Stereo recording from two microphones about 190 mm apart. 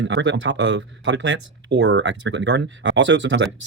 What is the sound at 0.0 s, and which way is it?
Speech, 75° right (ahead or behind).